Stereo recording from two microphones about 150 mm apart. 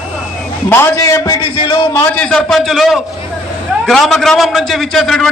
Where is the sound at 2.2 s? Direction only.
5° left (ahead or behind).